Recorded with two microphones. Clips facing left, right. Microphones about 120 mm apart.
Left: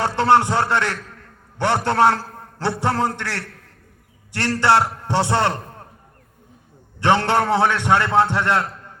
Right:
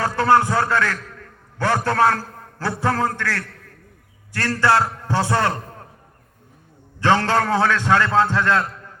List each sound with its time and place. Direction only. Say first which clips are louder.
0.0 s a man's voice: left 1 dB; 25° left (ahead or behind)
4.4 s a man's voice: left 1 dB; 25° left (ahead or behind)
7.0 s a man's voice: even; 20° left (ahead or behind)